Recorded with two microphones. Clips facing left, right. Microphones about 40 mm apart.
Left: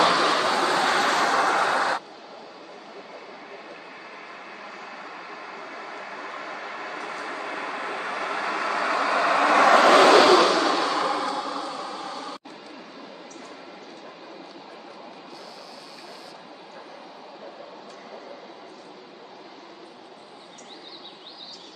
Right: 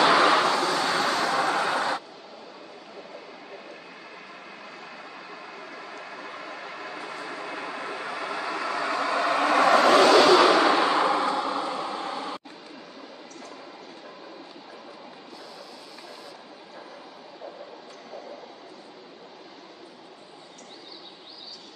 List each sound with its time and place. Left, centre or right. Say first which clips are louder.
0.1 s vehicle: right 2 dB; centre
0.7 s vehicle: left 3 dB; left
6.1 s vehicle: left 4 dB; left
6.9 s vehicle: left 3 dB; left
10.3 s vehicle: right 1 dB; centre